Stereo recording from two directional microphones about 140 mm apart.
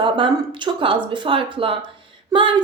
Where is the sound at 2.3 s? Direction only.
35° right (ahead or behind).